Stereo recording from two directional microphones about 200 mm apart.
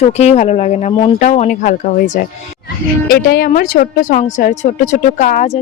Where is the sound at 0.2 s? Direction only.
35° left (ahead or behind).